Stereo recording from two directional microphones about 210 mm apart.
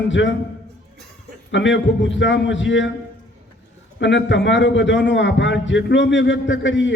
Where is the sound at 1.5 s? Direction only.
60° left (ahead or behind).